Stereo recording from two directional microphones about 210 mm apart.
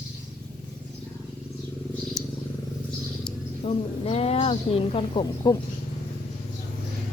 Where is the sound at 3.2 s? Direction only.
30° left (ahead or behind).